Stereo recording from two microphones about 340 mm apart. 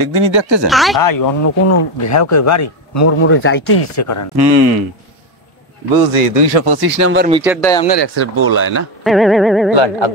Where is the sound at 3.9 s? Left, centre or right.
Left.